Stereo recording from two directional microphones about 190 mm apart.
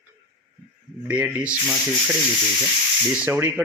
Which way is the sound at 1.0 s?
5° right (ahead or behind).